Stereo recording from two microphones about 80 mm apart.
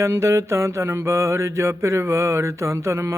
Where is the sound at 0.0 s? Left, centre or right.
Right.